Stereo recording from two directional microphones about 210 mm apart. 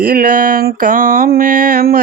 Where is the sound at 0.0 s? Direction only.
45° right (ahead or behind).